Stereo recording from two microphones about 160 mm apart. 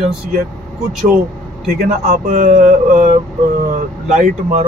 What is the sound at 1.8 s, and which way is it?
Speech, 50° right (ahead or behind).